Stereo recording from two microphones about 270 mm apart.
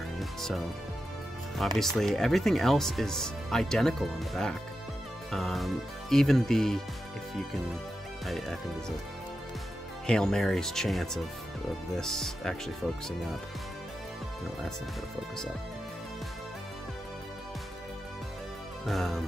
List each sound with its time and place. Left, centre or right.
0.2 s music: centre
1.8 s speech: centre
8.3 s speech: centre
10.0 s speech: centre
18.9 s speech: centre